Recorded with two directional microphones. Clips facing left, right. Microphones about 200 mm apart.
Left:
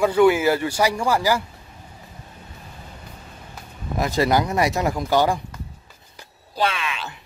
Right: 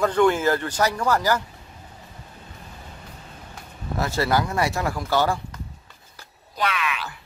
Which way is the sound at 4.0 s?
15° left (ahead or behind).